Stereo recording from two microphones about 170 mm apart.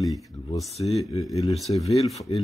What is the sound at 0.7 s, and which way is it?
Speech, 35° left (ahead or behind).